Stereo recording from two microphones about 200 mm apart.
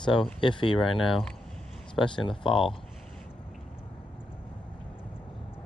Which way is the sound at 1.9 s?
25° left (ahead or behind).